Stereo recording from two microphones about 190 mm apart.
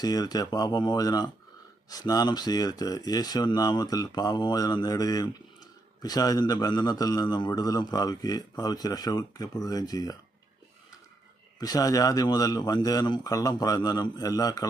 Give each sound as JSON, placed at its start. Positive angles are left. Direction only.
{"t": 0.0, "sound": "speech", "side_deg": 20}
{"t": 11.6, "sound": "speech", "side_deg": 20}